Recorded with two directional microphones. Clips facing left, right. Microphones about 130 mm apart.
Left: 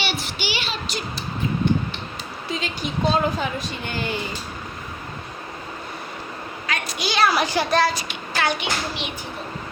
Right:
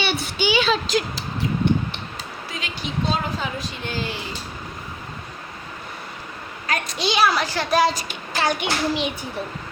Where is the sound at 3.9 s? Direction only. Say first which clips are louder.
Left 1 dB; 60° left (ahead or behind).